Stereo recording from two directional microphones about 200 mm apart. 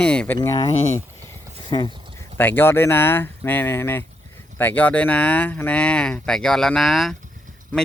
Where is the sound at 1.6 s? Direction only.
20° left (ahead or behind).